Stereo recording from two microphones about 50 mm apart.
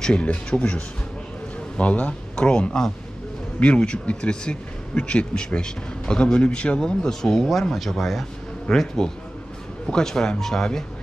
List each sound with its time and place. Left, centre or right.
0.0 s speech: left